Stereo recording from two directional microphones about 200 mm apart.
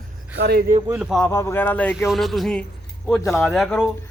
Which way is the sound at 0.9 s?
Centre (ahead or behind).